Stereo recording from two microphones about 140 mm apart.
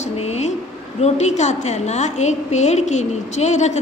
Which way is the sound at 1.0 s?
55° left (ahead or behind).